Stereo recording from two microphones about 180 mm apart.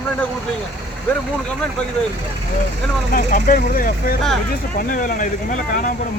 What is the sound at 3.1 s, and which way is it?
Speech, 50° left (ahead or behind).